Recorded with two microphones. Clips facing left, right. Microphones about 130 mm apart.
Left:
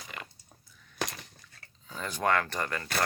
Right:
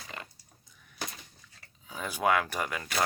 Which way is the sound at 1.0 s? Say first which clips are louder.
Left 5 dB; 80° left.